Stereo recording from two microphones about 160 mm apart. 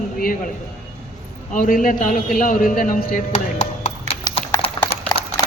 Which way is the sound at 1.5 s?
55° left (ahead or behind).